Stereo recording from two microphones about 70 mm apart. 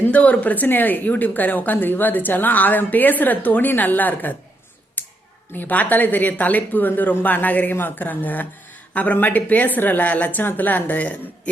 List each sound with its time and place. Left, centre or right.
0.0 s a woman's voice: left
5.0 s a sound: left
5.5 s a woman's voice: left